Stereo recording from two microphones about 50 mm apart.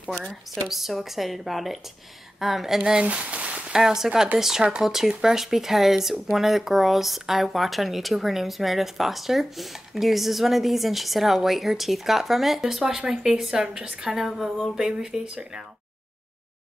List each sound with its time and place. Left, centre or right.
0.7 s speech: centre
3.1 s a sound: right
3.7 s speech: centre